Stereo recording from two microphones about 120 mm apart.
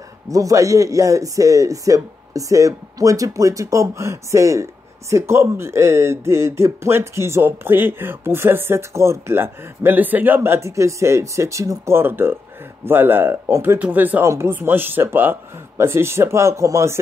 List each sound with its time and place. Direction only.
0.3 s speech: 30° right (ahead or behind)